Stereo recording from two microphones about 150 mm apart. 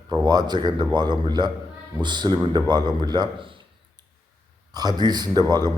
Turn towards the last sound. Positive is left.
turn(degrees=-25)  # may be behind; listen again after turning